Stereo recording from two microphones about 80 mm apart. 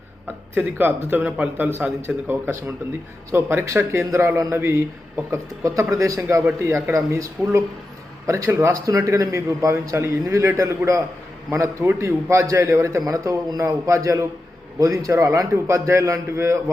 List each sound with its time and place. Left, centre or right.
0.5 s a man's voice: right